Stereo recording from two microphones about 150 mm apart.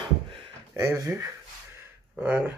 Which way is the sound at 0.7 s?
20° right (ahead or behind).